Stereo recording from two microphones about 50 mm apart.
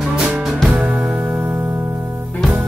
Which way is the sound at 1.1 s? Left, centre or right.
Right.